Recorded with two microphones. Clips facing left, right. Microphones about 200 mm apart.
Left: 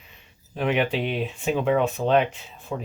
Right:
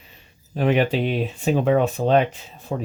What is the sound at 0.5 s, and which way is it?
Speech, 40° right (ahead or behind).